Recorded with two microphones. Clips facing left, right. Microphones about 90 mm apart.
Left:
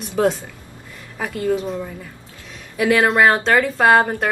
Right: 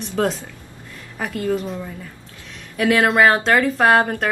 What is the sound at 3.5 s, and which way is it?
Speech, 15° left (ahead or behind).